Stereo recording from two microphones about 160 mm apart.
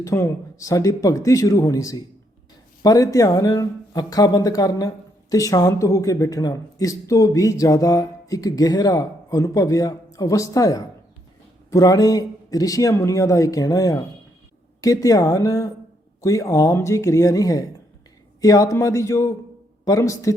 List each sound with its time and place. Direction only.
0.0 s speech: 20° left (ahead or behind)